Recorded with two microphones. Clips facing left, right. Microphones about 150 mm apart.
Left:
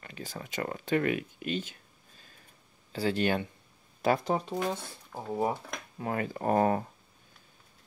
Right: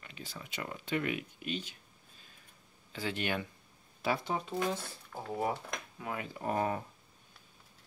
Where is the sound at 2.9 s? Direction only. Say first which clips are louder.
Left 7 dB; 35° left (ahead or behind).